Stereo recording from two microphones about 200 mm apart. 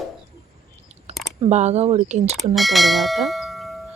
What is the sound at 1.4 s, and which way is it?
Speech, 35° right (ahead or behind).